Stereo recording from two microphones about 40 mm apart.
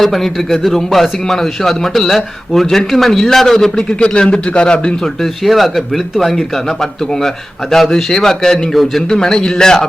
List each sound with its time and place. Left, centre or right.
0.0 s a man's voice: centre
4.1 s a man's voice: left
5.5 s speech: centre
7.7 s a man's voice: centre
9.0 s a man's voice: centre